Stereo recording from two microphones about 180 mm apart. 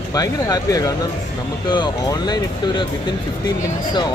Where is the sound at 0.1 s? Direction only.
20° left (ahead or behind).